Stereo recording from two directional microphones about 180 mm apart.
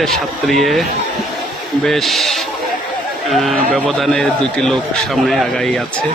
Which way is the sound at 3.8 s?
Centre (ahead or behind).